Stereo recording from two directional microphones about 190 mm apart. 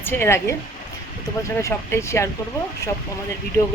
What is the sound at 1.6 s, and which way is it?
Speech, 15° left (ahead or behind).